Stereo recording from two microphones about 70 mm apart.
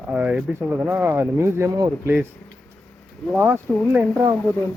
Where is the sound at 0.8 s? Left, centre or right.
Right.